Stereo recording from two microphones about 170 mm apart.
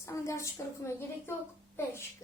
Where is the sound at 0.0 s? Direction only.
15° left (ahead or behind).